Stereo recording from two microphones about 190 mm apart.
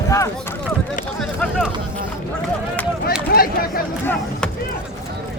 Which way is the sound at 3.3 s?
50° left (ahead or behind).